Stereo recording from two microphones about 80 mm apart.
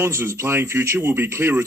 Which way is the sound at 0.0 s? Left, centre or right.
Right.